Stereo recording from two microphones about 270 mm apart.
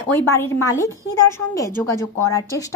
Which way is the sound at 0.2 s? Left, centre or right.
Centre.